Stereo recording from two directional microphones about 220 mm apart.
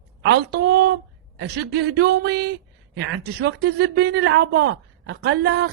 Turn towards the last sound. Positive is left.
turn(degrees=-50)  # may be behind; listen again after turning